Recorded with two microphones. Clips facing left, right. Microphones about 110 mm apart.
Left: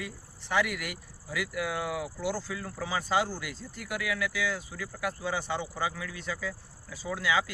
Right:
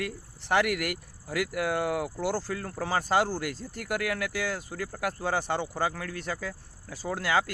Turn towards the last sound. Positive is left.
turn(degrees=-55)  # may be behind; listen again after turning